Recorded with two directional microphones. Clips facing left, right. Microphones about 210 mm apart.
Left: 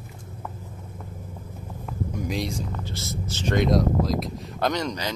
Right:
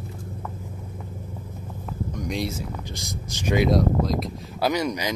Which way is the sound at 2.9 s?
15° right (ahead or behind).